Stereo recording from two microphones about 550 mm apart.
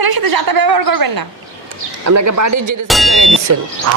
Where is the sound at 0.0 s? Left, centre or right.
Right.